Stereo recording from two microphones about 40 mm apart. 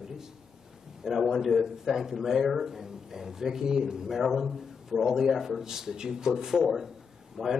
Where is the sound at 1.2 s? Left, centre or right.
Centre.